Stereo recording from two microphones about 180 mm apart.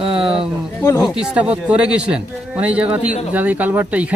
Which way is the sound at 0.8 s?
20° left (ahead or behind).